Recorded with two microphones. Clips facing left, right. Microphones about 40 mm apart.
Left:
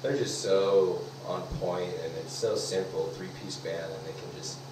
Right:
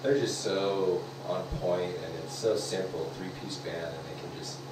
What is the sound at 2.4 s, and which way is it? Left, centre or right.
Speech, centre.